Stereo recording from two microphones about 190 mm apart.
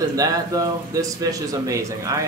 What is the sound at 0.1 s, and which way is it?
Speech, 20° right (ahead or behind).